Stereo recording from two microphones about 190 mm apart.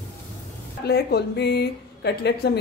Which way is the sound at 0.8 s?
60° left (ahead or behind).